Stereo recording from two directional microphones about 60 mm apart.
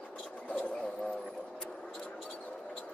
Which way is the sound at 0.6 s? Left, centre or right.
Centre.